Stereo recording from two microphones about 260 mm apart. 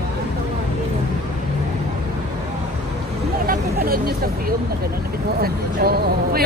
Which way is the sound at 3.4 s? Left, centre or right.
Right.